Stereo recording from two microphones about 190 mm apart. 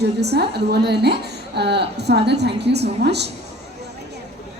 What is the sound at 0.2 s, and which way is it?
A woman's voice, 60° right (ahead or behind).